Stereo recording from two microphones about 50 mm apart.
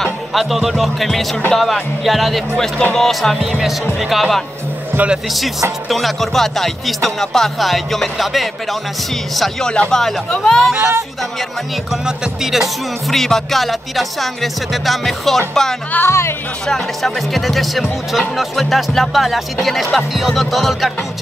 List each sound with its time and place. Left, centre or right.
0.3 s speech: centre
10.7 s speech: centre
11.9 s speech: centre
13.1 s speech: centre
16.1 s speech: left
16.6 s speech: centre